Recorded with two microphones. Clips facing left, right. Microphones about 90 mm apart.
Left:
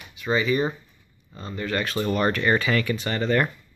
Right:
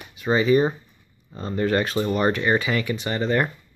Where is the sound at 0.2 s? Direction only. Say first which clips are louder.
Right 4 dB; 35° right (ahead or behind).